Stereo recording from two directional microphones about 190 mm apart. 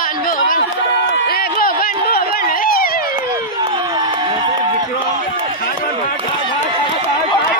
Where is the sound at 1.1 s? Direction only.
55° left (ahead or behind).